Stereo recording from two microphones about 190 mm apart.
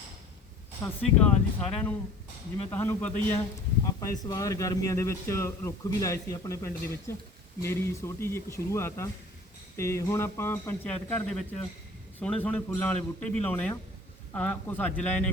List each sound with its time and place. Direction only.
0.8 s a man's voice: 15° left (ahead or behind)